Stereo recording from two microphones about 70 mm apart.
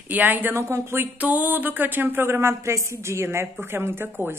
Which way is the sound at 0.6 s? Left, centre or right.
Right.